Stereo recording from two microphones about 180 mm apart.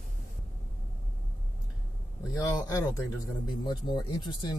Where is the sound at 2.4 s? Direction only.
20° left (ahead or behind).